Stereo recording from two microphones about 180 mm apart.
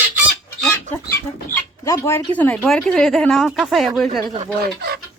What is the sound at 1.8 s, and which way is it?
Speech, 15° left (ahead or behind).